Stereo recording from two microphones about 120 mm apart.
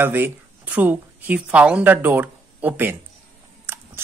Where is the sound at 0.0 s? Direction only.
15° right (ahead or behind).